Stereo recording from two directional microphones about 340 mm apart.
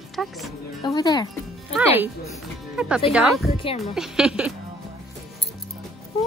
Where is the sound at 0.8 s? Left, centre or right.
Centre.